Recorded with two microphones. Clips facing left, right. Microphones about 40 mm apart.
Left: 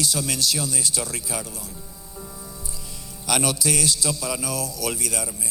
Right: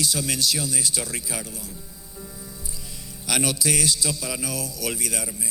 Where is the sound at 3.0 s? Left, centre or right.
Right.